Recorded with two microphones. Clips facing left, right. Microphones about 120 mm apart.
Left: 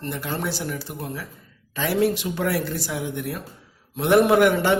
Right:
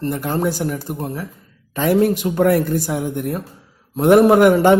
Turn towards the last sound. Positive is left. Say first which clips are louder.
# right 6 dB
turn(degrees=-45)  # may be behind; listen again after turning